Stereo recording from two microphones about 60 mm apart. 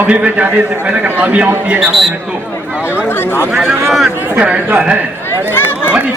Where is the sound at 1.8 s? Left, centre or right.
Centre.